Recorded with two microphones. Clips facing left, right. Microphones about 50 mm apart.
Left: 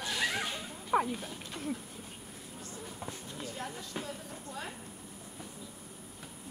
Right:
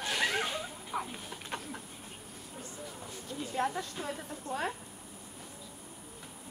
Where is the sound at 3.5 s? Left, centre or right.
Right.